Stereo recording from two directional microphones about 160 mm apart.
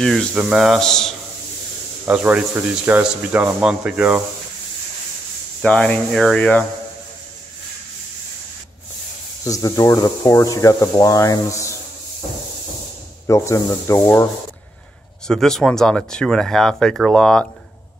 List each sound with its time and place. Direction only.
0.0 s speech: centre (ahead or behind)
2.0 s speech: 10° right (ahead or behind)
5.6 s speech: 5° left (ahead or behind)
9.4 s speech: 20° left (ahead or behind)
13.3 s speech: 20° left (ahead or behind)
15.2 s speech: 5° left (ahead or behind)